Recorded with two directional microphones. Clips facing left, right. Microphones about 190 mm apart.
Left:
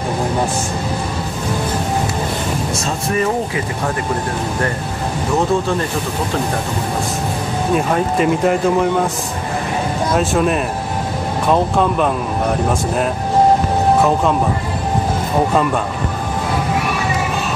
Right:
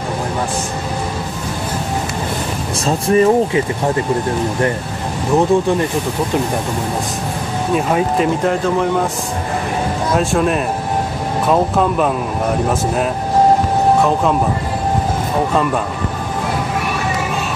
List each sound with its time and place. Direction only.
2.8 s speech: 30° right (ahead or behind)
5.5 s speech: 15° right (ahead or behind)
7.7 s speech: centre (ahead or behind)
10.1 s speech: centre (ahead or behind)